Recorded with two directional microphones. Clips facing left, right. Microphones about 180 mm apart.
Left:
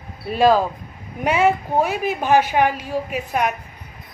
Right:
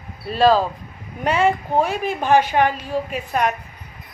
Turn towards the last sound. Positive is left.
turn(degrees=10)  # may be behind; listen again after turning